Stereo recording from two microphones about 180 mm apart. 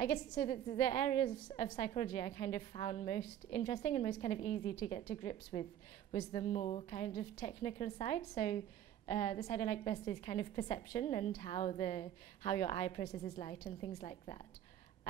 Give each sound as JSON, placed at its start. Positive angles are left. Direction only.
{"t": 0.0, "sound": "a woman's voice", "side_deg": 30}